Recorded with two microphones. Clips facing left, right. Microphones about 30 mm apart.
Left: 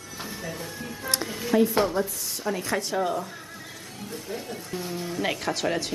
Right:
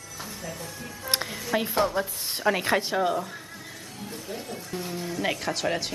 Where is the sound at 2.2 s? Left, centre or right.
Right.